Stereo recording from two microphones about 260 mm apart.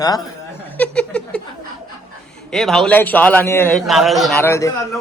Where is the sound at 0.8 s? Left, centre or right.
Centre.